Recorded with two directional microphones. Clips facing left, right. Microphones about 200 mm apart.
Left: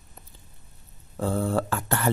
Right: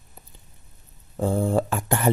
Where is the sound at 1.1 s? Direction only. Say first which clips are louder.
Right 3 dB; 15° right (ahead or behind).